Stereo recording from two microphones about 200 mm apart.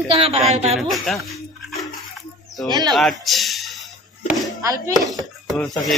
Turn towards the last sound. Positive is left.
turn(degrees=0)  # may be behind; listen again after turning